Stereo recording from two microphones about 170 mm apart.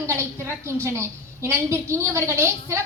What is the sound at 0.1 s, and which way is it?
A woman's voice, 15° right (ahead or behind).